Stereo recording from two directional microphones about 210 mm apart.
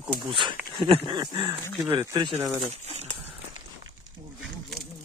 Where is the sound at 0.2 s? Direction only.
25° right (ahead or behind).